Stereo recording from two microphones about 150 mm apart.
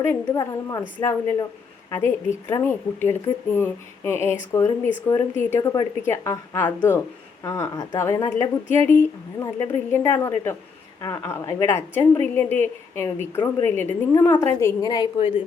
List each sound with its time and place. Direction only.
0.3 s a woman's voice: 20° left (ahead or behind)
14.8 s speech: 30° left (ahead or behind)